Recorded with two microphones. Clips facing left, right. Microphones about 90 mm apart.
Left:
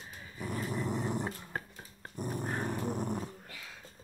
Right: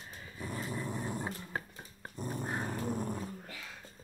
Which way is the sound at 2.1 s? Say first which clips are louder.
Left 2 dB; 15° left (ahead or behind).